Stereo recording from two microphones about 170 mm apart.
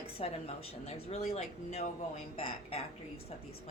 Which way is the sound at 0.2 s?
35° left (ahead or behind).